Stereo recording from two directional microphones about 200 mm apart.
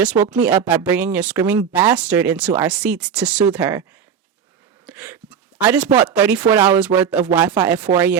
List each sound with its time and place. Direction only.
0.0 s speech: 5° right (ahead or behind)
4.9 s speech: 5° right (ahead or behind)